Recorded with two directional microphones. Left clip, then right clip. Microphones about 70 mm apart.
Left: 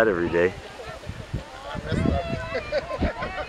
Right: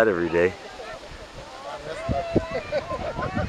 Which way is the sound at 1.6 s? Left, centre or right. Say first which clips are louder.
Left 3 dB; left.